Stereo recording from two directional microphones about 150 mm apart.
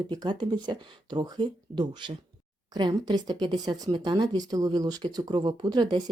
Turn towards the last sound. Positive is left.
turn(degrees=-30)  # may be behind; listen again after turning